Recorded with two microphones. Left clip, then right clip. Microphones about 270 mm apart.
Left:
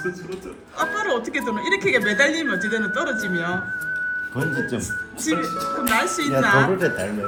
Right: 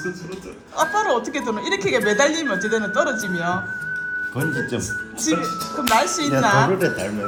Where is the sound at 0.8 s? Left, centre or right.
Centre.